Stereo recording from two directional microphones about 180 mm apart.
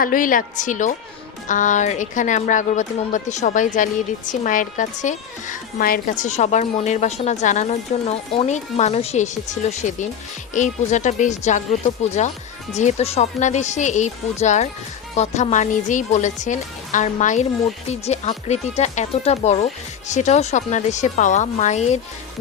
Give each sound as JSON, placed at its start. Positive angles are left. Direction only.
{"t": 0.0, "sound": "a woman's voice", "side_deg": 50}